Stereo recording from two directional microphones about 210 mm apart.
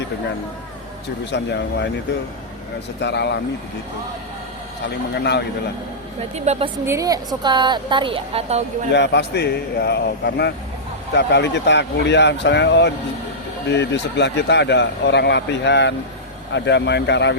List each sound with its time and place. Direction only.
1.2 s speech: 55° left (ahead or behind)
3.0 s speech: 55° left (ahead or behind)
6.3 s a woman's voice: 30° right (ahead or behind)
6.8 s a woman's voice: 15° right (ahead or behind)
8.9 s a man's voice: 55° left (ahead or behind)